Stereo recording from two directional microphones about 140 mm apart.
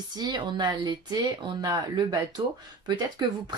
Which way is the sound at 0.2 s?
35° right (ahead or behind).